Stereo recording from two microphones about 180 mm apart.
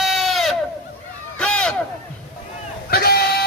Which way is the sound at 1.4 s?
5° left (ahead or behind).